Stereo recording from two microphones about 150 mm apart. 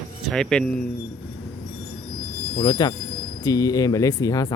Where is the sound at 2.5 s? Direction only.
30° left (ahead or behind).